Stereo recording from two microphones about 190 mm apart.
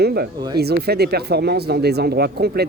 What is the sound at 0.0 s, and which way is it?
Speech, 60° right (ahead or behind).